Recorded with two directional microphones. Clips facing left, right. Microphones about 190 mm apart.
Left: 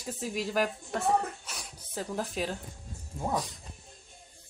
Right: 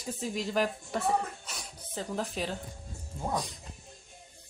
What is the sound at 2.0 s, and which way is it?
Speech, 5° left (ahead or behind).